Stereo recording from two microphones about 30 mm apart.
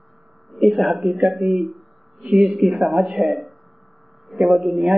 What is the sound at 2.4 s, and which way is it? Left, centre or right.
Speech, centre.